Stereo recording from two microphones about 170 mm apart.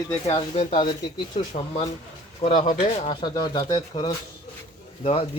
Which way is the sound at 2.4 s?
45° left (ahead or behind).